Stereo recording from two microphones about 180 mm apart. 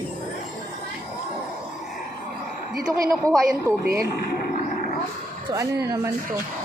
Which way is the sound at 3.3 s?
5° left (ahead or behind).